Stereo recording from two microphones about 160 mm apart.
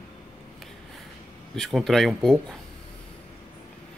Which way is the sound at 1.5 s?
Centre (ahead or behind).